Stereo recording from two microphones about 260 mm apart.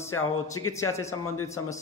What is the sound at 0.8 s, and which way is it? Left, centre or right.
Speech, centre.